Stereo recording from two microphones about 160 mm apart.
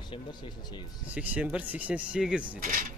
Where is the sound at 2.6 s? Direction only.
55° right (ahead or behind).